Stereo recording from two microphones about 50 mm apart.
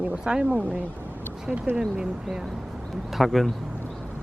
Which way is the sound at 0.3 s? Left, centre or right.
Right.